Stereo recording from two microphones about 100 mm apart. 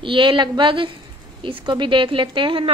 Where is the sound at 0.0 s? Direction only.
55° right (ahead or behind).